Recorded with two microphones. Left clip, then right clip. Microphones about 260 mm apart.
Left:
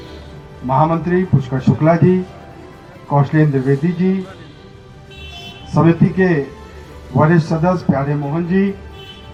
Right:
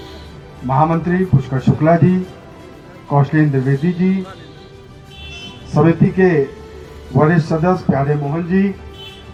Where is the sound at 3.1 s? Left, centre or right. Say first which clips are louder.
Even; right.